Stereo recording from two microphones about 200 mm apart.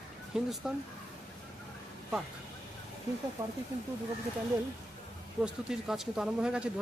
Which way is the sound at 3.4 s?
15° right (ahead or behind).